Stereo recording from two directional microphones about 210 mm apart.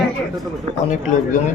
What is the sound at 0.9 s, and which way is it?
Speech, 40° left (ahead or behind).